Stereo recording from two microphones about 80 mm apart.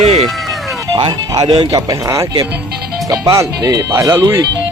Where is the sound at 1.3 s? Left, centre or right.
Right.